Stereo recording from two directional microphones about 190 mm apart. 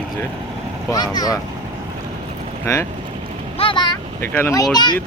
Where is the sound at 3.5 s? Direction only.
25° left (ahead or behind).